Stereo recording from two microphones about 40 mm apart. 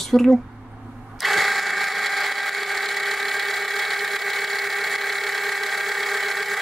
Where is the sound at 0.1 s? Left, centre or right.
Centre.